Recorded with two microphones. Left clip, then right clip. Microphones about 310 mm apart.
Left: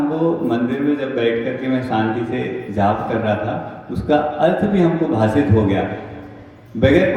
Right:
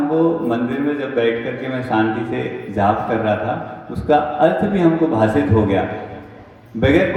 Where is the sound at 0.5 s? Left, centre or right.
Centre.